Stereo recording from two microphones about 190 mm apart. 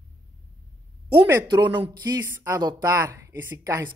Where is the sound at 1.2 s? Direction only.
15° right (ahead or behind).